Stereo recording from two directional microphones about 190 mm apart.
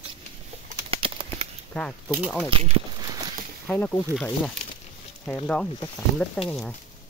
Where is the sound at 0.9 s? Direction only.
30° right (ahead or behind).